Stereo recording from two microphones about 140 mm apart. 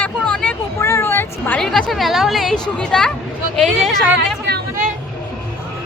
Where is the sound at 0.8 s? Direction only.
20° left (ahead or behind).